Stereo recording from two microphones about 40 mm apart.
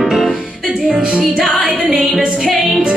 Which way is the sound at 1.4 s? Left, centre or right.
Centre.